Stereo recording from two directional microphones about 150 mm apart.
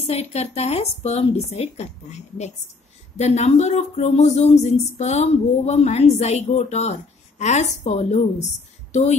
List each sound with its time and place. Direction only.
0.0 s speech: 45° left (ahead or behind)